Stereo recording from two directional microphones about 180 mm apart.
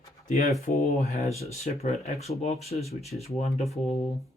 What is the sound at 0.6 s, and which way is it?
Speech, 45° left (ahead or behind).